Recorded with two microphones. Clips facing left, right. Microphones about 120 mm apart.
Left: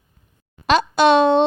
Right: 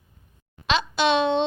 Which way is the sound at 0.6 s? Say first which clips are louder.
Left 7 dB; 45° left (ahead or behind).